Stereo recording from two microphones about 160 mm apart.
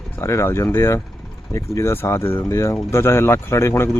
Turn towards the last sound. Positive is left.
turn(degrees=15)  # may be behind; listen again after turning